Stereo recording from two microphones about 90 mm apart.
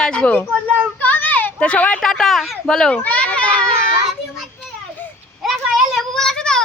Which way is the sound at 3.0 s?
15° left (ahead or behind).